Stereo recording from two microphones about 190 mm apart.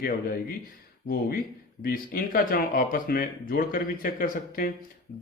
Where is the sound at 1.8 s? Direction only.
50° left (ahead or behind).